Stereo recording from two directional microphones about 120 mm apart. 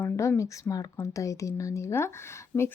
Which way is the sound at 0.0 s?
25° left (ahead or behind).